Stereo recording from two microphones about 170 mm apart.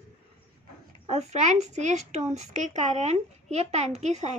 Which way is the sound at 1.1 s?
40° right (ahead or behind).